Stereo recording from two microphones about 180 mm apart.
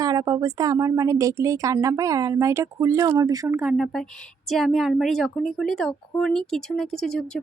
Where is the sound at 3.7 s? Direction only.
Centre (ahead or behind).